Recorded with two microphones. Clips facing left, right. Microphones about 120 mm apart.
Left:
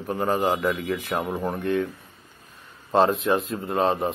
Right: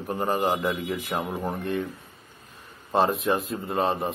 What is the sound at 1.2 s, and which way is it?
Speech, 15° left (ahead or behind).